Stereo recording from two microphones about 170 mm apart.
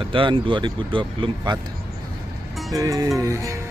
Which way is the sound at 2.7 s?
20° right (ahead or behind).